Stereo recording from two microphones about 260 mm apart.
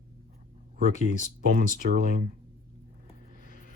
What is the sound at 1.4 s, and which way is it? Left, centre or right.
Speech, right.